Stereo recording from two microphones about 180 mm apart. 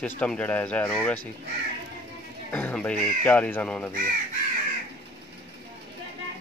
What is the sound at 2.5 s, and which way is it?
A man's voice, 10° left (ahead or behind).